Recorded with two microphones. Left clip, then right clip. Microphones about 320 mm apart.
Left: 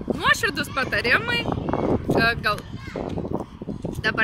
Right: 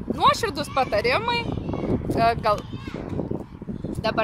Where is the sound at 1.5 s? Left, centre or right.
Left.